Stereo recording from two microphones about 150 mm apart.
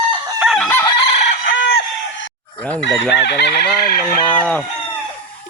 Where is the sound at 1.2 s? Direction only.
55° left (ahead or behind).